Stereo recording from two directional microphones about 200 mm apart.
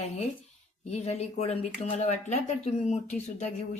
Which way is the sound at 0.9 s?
30° left (ahead or behind).